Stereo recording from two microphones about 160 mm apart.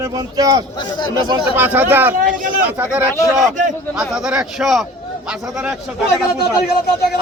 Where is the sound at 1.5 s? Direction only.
10° right (ahead or behind).